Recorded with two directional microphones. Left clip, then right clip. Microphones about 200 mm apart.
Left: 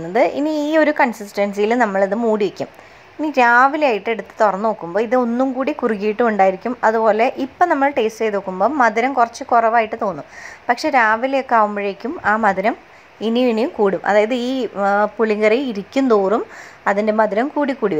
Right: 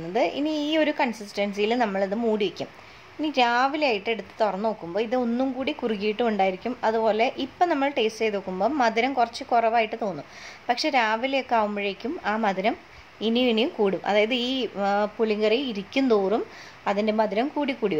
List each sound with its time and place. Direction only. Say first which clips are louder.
0.1 s a woman's voice: left 8 dB; 20° left (ahead or behind)
7.7 s a woman's voice: left 7 dB; 10° left (ahead or behind)
8.4 s a woman's voice: left 11 dB; 15° left (ahead or behind)